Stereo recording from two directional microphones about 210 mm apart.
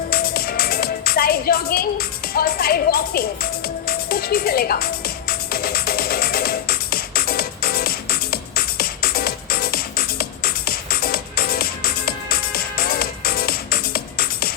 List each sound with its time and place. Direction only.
0.1 s music: 45° left (ahead or behind)